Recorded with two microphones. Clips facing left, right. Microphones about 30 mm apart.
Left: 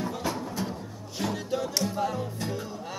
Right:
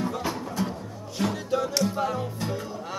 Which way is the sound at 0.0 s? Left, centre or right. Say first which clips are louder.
Right 2 dB; centre.